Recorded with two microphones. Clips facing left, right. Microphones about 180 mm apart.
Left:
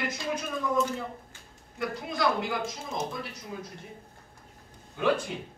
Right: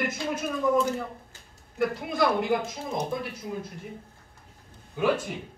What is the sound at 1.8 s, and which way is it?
Speech, 55° right (ahead or behind).